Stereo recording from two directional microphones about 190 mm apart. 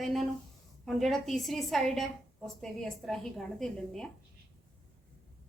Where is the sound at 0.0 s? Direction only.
Centre (ahead or behind).